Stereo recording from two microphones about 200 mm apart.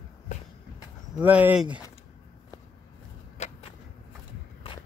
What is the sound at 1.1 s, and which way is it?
Speech, 10° right (ahead or behind).